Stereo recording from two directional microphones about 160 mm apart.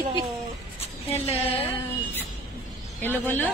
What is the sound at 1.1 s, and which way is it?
Speech, 40° left (ahead or behind).